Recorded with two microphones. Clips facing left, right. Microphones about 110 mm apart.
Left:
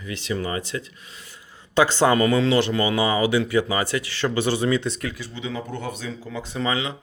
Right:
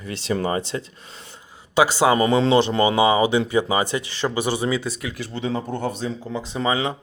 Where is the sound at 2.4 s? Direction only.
30° right (ahead or behind); by 5.1 s 5° right (ahead or behind).